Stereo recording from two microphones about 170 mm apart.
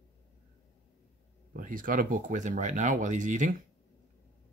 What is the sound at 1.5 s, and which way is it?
Speech, 55° right (ahead or behind).